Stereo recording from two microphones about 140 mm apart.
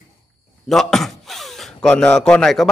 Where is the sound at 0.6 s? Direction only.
Centre (ahead or behind).